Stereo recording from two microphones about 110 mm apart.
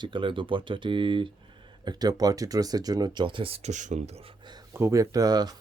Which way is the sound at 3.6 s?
90° right.